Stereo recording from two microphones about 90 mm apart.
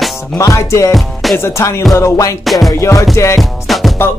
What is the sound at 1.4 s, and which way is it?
Music, 30° left (ahead or behind).